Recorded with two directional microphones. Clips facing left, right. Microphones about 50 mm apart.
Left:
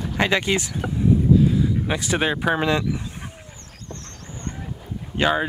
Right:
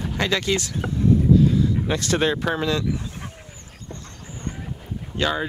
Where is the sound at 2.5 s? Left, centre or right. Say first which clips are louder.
Left 2 dB; left.